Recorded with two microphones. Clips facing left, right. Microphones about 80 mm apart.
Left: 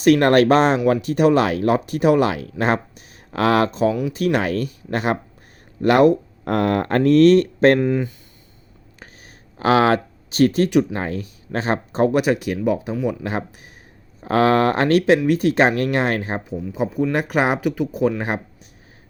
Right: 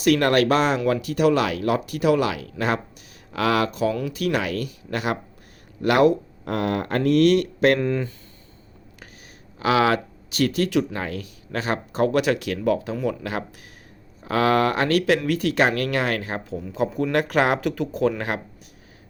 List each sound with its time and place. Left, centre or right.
0.0 s speech: left
7.8 s speech: centre
9.6 s speech: left
16.9 s speech: centre
17.2 s speech: centre